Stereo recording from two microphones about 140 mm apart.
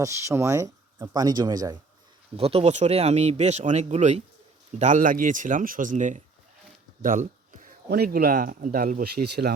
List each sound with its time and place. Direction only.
0.0 s speech: 20° right (ahead or behind)
2.3 s speech: 45° right (ahead or behind)
4.8 s speech: 65° right (ahead or behind); by 9.5 s 85° right